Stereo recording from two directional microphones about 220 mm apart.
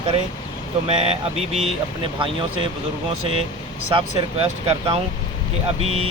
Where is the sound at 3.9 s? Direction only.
25° right (ahead or behind).